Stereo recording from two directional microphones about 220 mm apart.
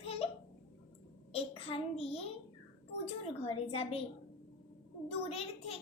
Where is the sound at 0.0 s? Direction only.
25° left (ahead or behind).